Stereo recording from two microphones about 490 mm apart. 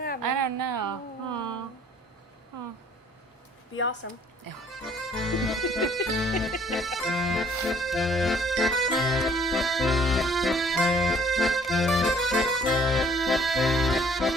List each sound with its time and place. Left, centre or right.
0.2 s a sound: right
4.0 s speech: left
4.7 s accordion: centre